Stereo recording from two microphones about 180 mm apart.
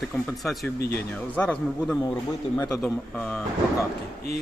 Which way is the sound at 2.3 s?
20° left (ahead or behind).